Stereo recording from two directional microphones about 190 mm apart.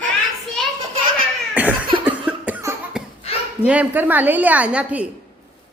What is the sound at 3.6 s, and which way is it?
A woman's voice, 10° right (ahead or behind).